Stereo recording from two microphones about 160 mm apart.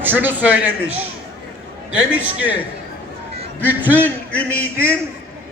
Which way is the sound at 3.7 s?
10° right (ahead or behind).